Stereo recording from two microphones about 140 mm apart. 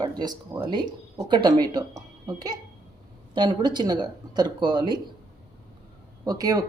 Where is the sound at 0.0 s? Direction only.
30° right (ahead or behind).